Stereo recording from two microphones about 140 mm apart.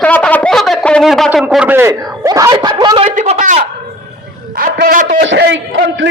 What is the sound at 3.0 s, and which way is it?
Speech, 55° right (ahead or behind).